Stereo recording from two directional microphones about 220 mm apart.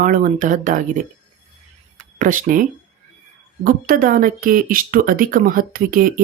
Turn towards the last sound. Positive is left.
turn(degrees=-40)  # may be behind; listen again after turning